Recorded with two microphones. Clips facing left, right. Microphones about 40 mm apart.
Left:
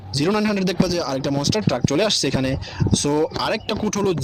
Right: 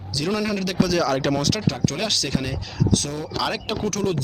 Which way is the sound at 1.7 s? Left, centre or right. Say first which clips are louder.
Left 5 dB; left.